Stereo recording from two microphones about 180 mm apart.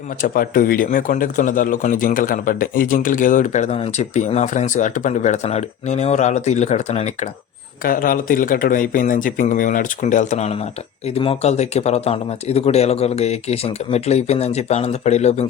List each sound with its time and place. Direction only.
0.2 s speech: 50° left (ahead or behind)
7.9 s speech: 50° left (ahead or behind)